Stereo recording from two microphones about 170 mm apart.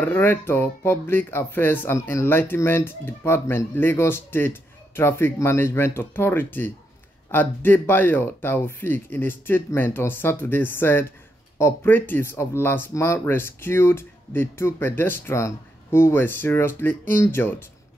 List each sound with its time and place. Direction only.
0.0 s speech: 10° left (ahead or behind)